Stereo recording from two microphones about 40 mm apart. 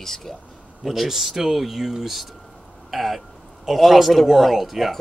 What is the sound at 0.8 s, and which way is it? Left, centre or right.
Speech, centre.